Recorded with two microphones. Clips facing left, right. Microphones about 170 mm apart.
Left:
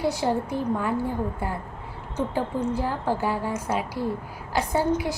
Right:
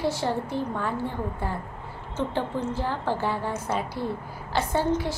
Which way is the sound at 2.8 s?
5° left (ahead or behind).